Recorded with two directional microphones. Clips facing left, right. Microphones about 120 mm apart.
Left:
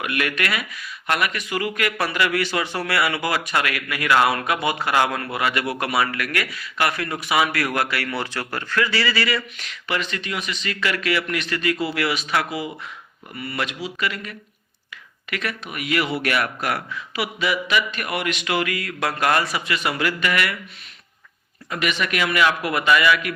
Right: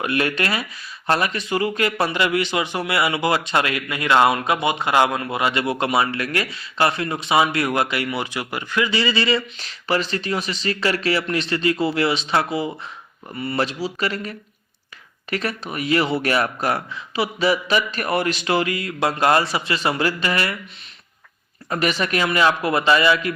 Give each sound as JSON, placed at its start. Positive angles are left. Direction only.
{"t": 0.0, "sound": "speech", "side_deg": -30}
{"t": 21.7, "sound": "speech", "side_deg": -35}